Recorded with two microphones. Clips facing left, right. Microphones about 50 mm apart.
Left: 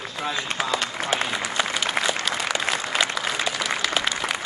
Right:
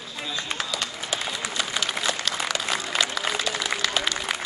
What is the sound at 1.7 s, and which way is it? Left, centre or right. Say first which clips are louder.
Applause: left 3 dB; centre.